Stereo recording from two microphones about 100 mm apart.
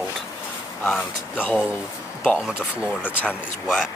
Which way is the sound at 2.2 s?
5° right (ahead or behind).